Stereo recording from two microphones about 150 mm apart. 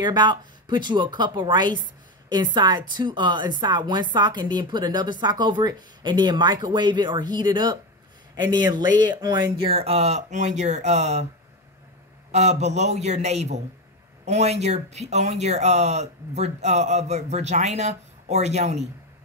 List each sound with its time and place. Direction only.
0.0 s speech: 30° right (ahead or behind); by 11.2 s 50° right (ahead or behind)
12.3 s speech: 50° right (ahead or behind)